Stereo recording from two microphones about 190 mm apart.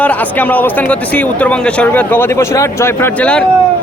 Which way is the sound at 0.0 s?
10° left (ahead or behind).